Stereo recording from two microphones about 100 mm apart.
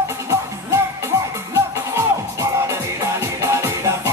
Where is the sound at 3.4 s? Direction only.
30° right (ahead or behind).